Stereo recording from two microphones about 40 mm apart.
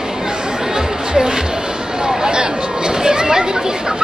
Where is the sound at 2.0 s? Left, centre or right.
Centre.